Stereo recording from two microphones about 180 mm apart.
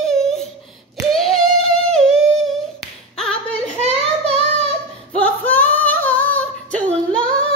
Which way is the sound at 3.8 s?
35° right (ahead or behind).